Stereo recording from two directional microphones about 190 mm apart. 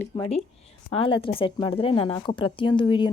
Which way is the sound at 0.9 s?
30° left (ahead or behind).